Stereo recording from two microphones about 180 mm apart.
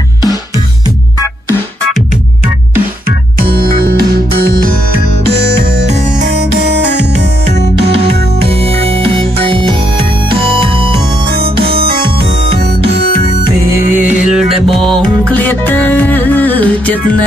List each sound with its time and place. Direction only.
3.3 s music: 60° right (ahead or behind)
5.2 s music: 65° right (ahead or behind)
8.4 s music: 35° right (ahead or behind)
11.7 s music: 60° right (ahead or behind)
14.3 s music: centre (ahead or behind)